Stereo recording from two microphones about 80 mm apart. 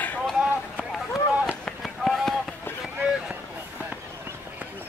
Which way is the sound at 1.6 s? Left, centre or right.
Centre.